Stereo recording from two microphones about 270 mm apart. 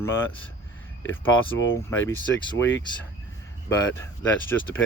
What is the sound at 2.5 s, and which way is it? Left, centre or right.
Speech, left.